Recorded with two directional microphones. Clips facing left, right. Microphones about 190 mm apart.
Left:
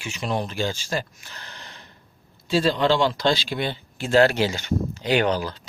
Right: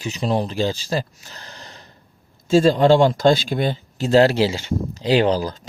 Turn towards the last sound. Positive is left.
turn(degrees=-35)  # may be behind; listen again after turning